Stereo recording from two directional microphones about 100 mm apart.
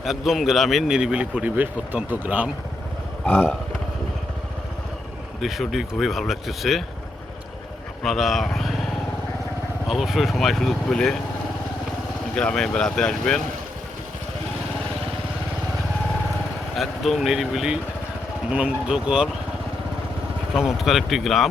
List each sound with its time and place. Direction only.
0.0 s a man's voice: 5° right (ahead or behind)
3.2 s speech: 15° left (ahead or behind)
5.4 s speech: centre (ahead or behind)
8.0 s speech: centre (ahead or behind)
9.8 s speech: centre (ahead or behind)
12.3 s speech: 10° left (ahead or behind)
16.7 s a man's voice: centre (ahead or behind)
20.5 s speech: 5° right (ahead or behind)